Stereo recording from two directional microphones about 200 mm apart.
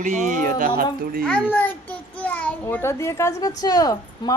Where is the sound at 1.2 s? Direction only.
5° left (ahead or behind).